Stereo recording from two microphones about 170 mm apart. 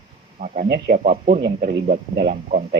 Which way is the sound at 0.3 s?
45° right (ahead or behind).